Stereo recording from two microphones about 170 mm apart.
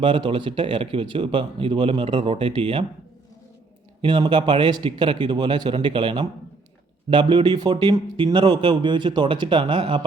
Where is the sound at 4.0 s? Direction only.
30° right (ahead or behind).